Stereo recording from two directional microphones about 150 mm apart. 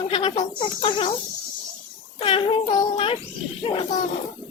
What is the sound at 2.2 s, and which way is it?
Speech, 35° left (ahead or behind).